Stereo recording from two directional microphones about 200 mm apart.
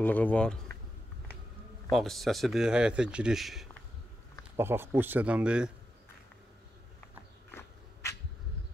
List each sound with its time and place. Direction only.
0.0 s speech: 10° left (ahead or behind)
1.9 s speech: centre (ahead or behind)
4.6 s speech: 10° right (ahead or behind)
7.5 s a sound: 15° left (ahead or behind)